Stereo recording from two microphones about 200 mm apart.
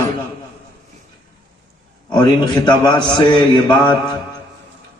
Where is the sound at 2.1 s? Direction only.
20° left (ahead or behind).